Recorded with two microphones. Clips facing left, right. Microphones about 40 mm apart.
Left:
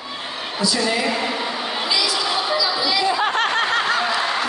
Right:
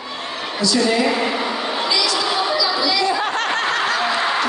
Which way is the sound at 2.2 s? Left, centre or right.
Centre.